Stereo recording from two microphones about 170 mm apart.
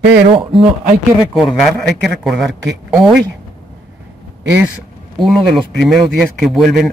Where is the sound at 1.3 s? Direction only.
Centre (ahead or behind).